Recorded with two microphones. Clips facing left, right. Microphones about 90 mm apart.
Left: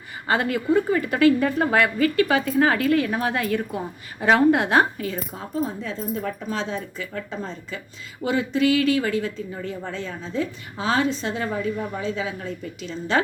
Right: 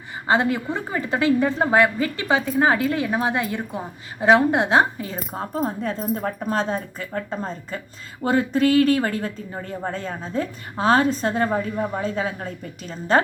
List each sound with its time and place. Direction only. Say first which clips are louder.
0.3 s a woman's voice: right 1 dB; 25° right (ahead or behind)
5.6 s speech: right 4 dB; 50° right (ahead or behind)